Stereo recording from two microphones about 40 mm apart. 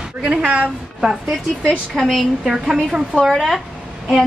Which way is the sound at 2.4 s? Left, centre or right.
Centre.